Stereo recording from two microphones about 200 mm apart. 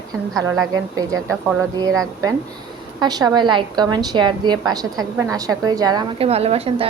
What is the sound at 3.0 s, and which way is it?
A woman's voice, 20° right (ahead or behind).